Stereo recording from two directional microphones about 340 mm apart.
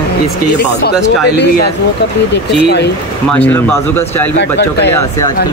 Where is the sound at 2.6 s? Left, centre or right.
Left.